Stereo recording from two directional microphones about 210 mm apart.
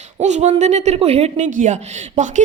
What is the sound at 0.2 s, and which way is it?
A woman's voice, 35° right (ahead or behind).